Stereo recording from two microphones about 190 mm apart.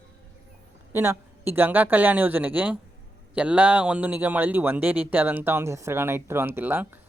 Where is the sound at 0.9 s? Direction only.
10° right (ahead or behind).